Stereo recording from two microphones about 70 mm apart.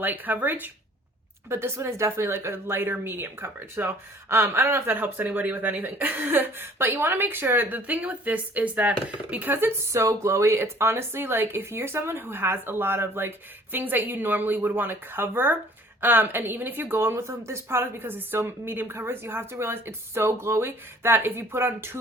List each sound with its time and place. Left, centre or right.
0.0 s speech: right
1.5 s speech: right